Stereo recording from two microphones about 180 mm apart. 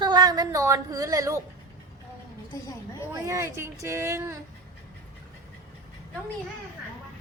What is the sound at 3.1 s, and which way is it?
Speech, 15° right (ahead or behind).